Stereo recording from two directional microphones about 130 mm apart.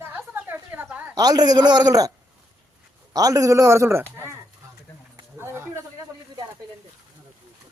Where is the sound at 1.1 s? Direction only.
30° right (ahead or behind).